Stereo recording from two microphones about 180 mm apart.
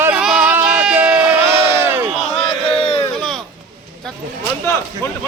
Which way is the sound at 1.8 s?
10° right (ahead or behind).